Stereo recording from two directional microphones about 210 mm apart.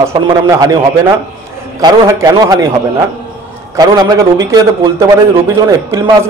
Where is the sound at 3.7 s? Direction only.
15° right (ahead or behind).